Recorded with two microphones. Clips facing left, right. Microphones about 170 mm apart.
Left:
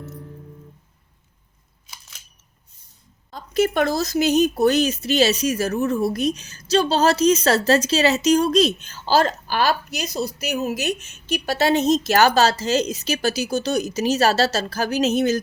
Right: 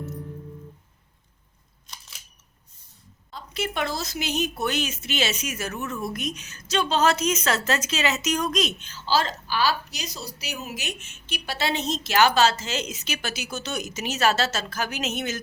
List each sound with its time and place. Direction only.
1.9 s camera: centre (ahead or behind)
3.3 s a woman's voice: 45° left (ahead or behind)
8.9 s a woman's voice: 50° left (ahead or behind)